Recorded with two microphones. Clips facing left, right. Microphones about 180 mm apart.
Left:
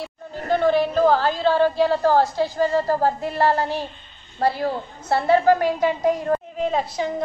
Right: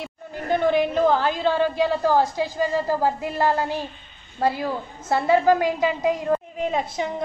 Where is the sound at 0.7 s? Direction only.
15° right (ahead or behind).